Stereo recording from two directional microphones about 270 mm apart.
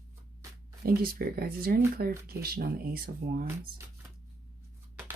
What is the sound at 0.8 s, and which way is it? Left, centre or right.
Speech, right.